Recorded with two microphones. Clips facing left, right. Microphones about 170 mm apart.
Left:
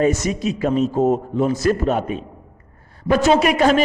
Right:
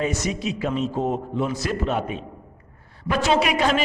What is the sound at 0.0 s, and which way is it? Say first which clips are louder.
A man's voice: left 6 dB; 45° left (ahead or behind).